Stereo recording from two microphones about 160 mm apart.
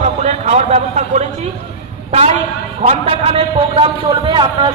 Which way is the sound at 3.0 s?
35° right (ahead or behind).